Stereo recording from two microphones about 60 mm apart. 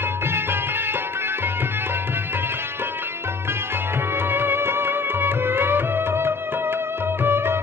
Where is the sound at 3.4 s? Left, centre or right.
Right.